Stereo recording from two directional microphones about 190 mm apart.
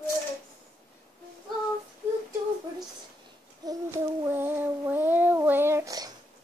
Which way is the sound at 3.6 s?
15° right (ahead or behind).